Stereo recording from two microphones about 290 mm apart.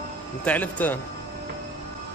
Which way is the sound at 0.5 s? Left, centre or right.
Centre.